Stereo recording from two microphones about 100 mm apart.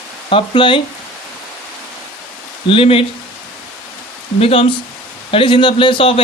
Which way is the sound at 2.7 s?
65° left (ahead or behind).